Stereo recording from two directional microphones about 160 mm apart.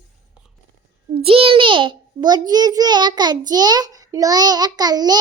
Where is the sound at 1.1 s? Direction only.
35° right (ahead or behind).